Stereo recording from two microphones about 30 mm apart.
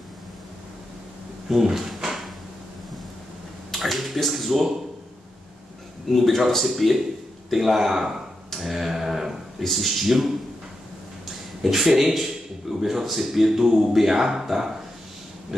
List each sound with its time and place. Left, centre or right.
1.5 s speech: centre
3.7 s a sound: centre
6.0 s a man's voice: centre
8.5 s a sound: centre
9.6 s speech: centre
11.6 s a man's voice: centre